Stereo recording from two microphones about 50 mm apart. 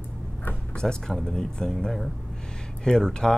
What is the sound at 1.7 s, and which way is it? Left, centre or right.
Speech, centre.